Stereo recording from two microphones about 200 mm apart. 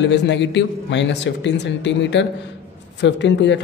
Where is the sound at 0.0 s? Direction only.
60° left (ahead or behind).